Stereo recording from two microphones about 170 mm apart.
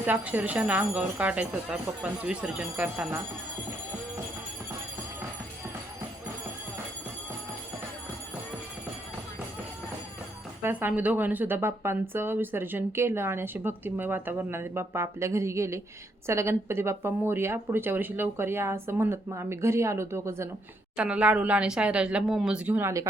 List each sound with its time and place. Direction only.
0.0 s speech: 10° right (ahead or behind)
10.6 s speech: 10° right (ahead or behind)